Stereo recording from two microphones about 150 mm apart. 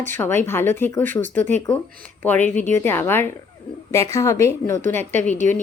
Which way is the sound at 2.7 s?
15° left (ahead or behind).